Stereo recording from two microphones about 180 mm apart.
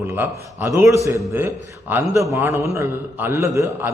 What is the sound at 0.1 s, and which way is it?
A man's voice, 15° right (ahead or behind).